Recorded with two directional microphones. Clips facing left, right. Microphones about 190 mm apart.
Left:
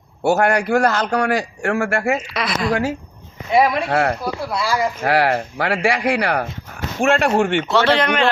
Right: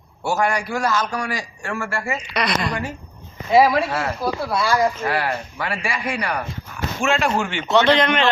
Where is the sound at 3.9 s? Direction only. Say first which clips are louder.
Left 6 dB; 65° left (ahead or behind).